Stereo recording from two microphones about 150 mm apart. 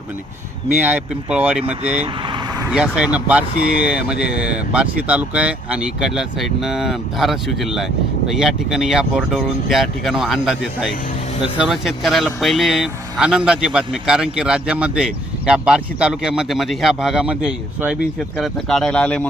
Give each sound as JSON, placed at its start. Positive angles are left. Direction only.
{"t": 0.8, "sound": "speech", "side_deg": -10}
{"t": 2.2, "sound": "vehicle", "side_deg": -30}
{"t": 2.6, "sound": "speech", "side_deg": -5}